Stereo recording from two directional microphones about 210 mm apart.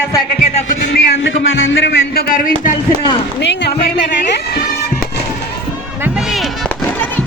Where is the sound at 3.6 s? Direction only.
50° left (ahead or behind).